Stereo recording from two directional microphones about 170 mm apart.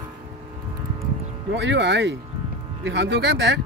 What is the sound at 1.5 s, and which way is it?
Speech, 90° right.